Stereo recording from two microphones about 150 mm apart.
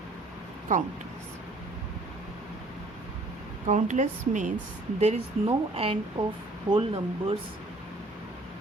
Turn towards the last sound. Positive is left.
turn(degrees=-40)  # may be behind; listen again after turning